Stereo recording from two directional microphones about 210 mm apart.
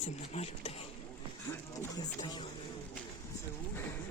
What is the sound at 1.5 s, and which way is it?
Speech, 15° left (ahead or behind).